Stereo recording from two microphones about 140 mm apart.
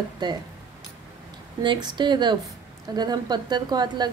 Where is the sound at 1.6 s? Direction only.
35° right (ahead or behind).